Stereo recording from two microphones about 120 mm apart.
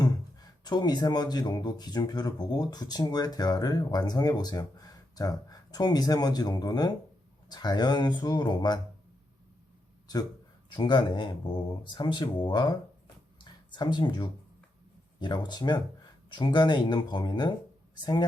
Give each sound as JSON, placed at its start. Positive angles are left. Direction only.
{"t": 0.6, "sound": "speech", "side_deg": 35}
{"t": 10.7, "sound": "speech", "side_deg": 40}
{"t": 13.4, "sound": "a sound", "side_deg": 40}
{"t": 15.2, "sound": "speech", "side_deg": 40}